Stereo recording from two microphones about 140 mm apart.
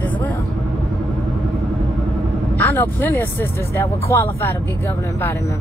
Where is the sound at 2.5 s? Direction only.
15° left (ahead or behind).